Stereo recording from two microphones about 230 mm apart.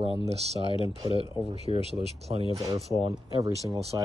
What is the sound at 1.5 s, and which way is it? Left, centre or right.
Speech, right.